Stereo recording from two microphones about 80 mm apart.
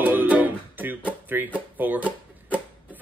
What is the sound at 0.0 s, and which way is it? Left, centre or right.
Music, right.